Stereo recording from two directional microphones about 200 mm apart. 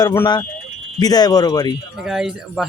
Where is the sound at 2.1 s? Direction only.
Centre (ahead or behind).